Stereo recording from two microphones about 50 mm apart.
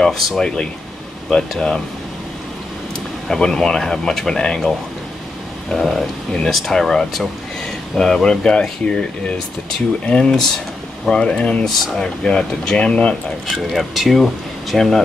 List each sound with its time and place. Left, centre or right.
0.0 s speech: centre
0.4 s speech: centre
3.3 s speech: centre
10.0 s speech: centre
13.7 s speech: centre